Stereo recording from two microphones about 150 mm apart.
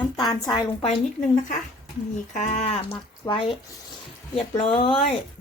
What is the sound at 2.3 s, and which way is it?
Speech, 55° left (ahead or behind).